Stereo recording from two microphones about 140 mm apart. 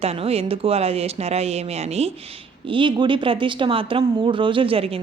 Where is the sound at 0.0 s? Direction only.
45° right (ahead or behind).